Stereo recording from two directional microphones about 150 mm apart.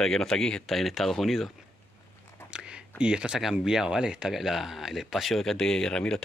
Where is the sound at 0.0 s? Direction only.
5° left (ahead or behind).